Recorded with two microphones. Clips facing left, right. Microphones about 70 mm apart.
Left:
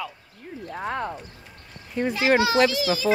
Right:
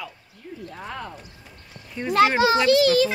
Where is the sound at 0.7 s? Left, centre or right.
Left.